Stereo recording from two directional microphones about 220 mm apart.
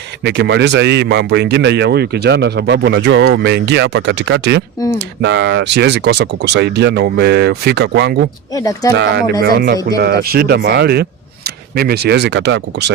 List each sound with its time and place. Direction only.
0.3 s speech: 50° right (ahead or behind)
8.5 s speech: 15° left (ahead or behind)
9.0 s speech: 50° right (ahead or behind)